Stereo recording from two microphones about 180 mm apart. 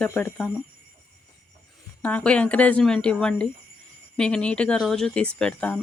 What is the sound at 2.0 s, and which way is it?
Speech, 5° left (ahead or behind).